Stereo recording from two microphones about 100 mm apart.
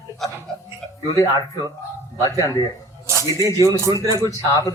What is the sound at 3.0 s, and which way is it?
Speech, 30° right (ahead or behind).